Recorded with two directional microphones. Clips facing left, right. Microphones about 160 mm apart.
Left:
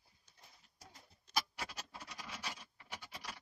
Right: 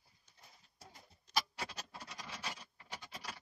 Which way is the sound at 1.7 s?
5° left (ahead or behind).